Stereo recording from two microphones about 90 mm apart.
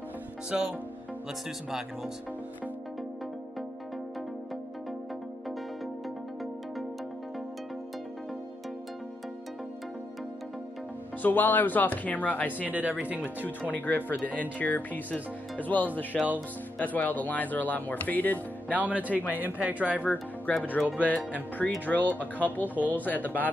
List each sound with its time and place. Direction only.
0.5 s speech: 5° right (ahead or behind)
11.2 s speech: 20° left (ahead or behind)
12.5 s speech: 20° right (ahead or behind)
13.6 s speech: 20° left (ahead or behind)
18.7 s speech: 20° right (ahead or behind)
20.0 s speech: 20° left (ahead or behind)